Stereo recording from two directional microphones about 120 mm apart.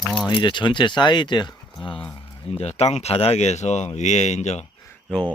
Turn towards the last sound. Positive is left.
turn(degrees=10)  # may be behind; listen again after turning